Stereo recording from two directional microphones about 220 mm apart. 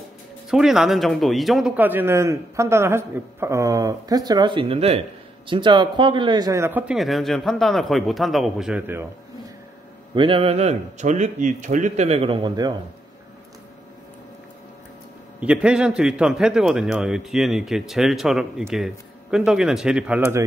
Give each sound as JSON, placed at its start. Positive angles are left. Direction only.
{"t": 0.5, "sound": "a man's voice", "side_deg": 0}
{"t": 10.1, "sound": "a man's voice", "side_deg": -25}
{"t": 15.4, "sound": "a man's voice", "side_deg": -5}